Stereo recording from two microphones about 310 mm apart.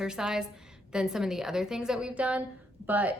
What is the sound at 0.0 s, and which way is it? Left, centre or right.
A woman's voice, centre.